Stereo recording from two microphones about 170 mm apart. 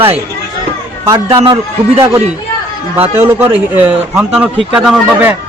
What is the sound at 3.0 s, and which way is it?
A man's voice, 15° right (ahead or behind).